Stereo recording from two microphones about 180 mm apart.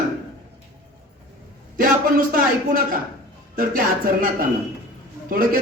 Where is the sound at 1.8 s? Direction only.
50° right (ahead or behind).